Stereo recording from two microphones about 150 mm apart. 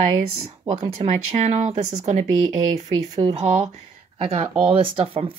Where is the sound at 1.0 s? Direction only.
50° right (ahead or behind).